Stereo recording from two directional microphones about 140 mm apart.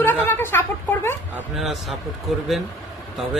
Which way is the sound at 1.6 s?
Centre (ahead or behind).